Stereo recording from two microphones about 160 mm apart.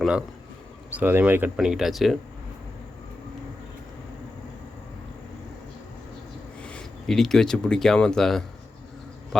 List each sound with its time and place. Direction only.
0.0 s speech: 5° right (ahead or behind)
6.6 s a man's voice: 5° left (ahead or behind)